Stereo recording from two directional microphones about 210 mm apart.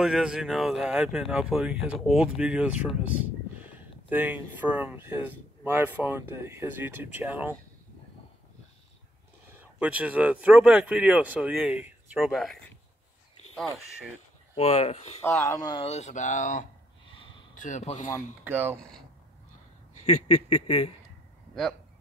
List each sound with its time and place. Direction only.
0.0 s speech: centre (ahead or behind)
9.6 s speech: 5° right (ahead or behind)
14.5 s speech: 30° left (ahead or behind)
15.2 s speech: 15° left (ahead or behind); by 18.1 s 35° left (ahead or behind)
18.4 s speech: 10° right (ahead or behind)
18.8 s speech: 5° left (ahead or behind)
20.2 s speech: 30° left (ahead or behind)